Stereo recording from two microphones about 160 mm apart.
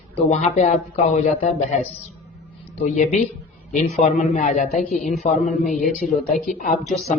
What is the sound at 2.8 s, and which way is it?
A man's voice, 50° left (ahead or behind).